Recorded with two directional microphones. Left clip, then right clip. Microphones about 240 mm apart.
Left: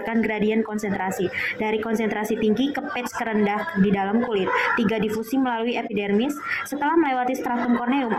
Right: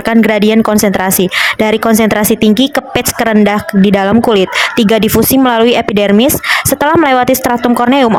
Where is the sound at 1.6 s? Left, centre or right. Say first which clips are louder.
Right 13 dB; right.